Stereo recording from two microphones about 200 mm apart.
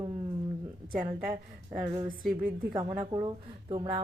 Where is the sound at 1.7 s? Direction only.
25° right (ahead or behind).